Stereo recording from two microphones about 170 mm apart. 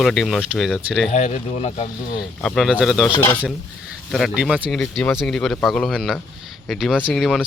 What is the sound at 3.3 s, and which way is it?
Speech, 10° left (ahead or behind).